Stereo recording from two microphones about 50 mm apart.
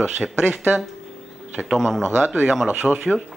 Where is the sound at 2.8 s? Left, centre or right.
Centre.